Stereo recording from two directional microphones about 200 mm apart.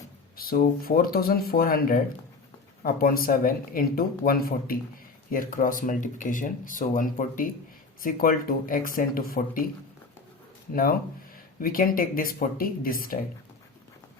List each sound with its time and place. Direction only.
0.3 s speech: 45° left (ahead or behind)
11.6 s speech: 45° left (ahead or behind)